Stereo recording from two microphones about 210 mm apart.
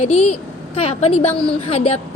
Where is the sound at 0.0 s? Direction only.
30° left (ahead or behind).